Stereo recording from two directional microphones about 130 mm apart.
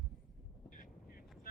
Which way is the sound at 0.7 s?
90° left.